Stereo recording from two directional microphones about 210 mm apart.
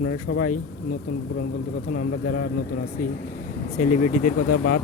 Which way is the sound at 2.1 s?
90° left.